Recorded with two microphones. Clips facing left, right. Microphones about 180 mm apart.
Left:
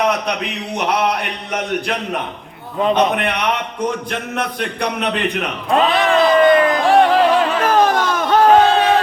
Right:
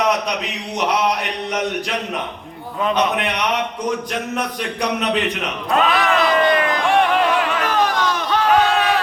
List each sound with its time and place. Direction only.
2.9 s a man's voice: 55° left (ahead or behind)
5.7 s music: 30° left (ahead or behind)